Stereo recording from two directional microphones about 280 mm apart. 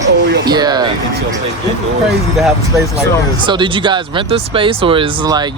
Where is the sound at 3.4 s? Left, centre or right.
Centre.